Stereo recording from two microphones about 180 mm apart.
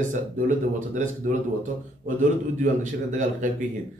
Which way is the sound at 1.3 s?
45° right (ahead or behind).